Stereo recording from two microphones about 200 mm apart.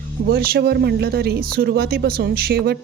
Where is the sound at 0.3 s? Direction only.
50° right (ahead or behind).